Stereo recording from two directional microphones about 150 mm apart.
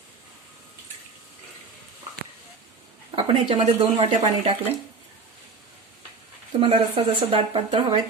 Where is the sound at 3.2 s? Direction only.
35° right (ahead or behind).